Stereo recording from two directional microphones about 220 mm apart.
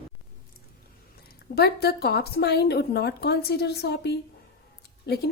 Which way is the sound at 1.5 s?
45° left (ahead or behind).